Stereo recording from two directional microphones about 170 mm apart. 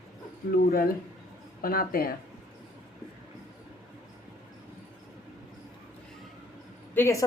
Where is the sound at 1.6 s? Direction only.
60° left (ahead or behind).